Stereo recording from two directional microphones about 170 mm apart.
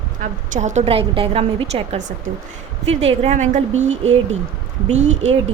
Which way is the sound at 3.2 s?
45° right (ahead or behind).